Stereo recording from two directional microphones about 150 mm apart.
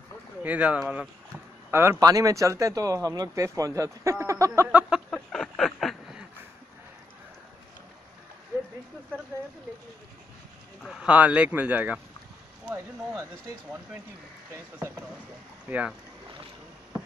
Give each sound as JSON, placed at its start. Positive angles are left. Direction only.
{"t": 0.4, "sound": "speech", "side_deg": -10}
{"t": 4.6, "sound": "a sound", "side_deg": -5}
{"t": 10.8, "sound": "speech", "side_deg": 0}
{"t": 12.7, "sound": "speech", "side_deg": -25}
{"t": 15.7, "sound": "speech", "side_deg": -15}